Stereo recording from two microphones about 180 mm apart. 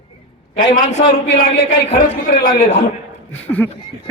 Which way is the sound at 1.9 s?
50° left (ahead or behind).